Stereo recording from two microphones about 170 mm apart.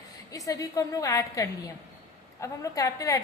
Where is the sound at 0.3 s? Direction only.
20° left (ahead or behind).